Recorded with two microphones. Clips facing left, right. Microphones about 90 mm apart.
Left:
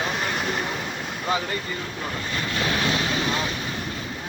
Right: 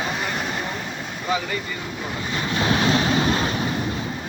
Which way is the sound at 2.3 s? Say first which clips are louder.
Right 5 dB; 25° right (ahead or behind).